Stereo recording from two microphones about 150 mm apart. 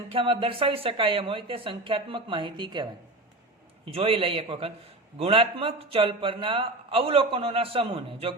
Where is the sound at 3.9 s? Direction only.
40° right (ahead or behind).